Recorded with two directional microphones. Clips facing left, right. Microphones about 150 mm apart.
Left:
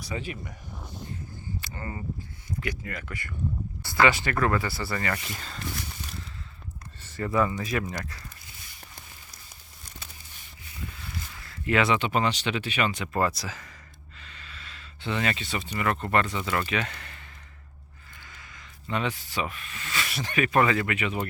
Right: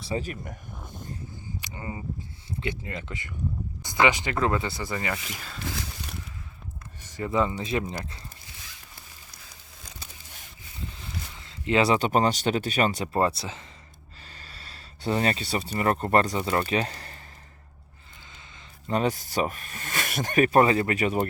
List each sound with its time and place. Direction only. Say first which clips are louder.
0.0 s speech: right 3 dB; 35° right (ahead or behind)
0.9 s a sound: left 1 dB; 50° right (ahead or behind)
1.3 s a sound: left 1 dB; 15° right (ahead or behind)
2.5 s speech: right 1 dB; 25° right (ahead or behind)
5.1 s speech: left 1 dB; 5° right (ahead or behind)
7.0 s speech: even; 15° right (ahead or behind)
11.3 s speech: right 2 dB; 20° right (ahead or behind)
14.2 s speech: even; 40° right (ahead or behind)
18.9 s speech: right 4 dB; 40° right (ahead or behind)